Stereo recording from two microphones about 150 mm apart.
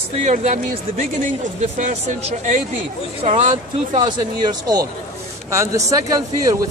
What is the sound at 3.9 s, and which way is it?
A man's voice, 25° right (ahead or behind).